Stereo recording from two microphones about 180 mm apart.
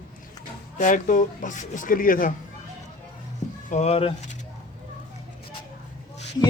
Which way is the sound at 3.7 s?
35° left (ahead or behind).